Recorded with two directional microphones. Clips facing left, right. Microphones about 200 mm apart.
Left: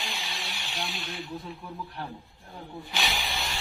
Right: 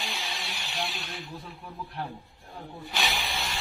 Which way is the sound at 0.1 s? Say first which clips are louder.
Right 1 dB; centre (ahead or behind).